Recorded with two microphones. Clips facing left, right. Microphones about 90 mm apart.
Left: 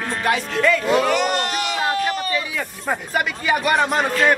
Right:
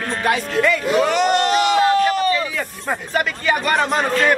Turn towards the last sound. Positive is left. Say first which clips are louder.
# right 1 dB
turn(degrees=5)  # may be behind; listen again after turning